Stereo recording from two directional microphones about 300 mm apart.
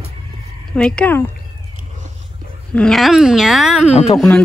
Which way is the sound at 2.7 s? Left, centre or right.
Centre.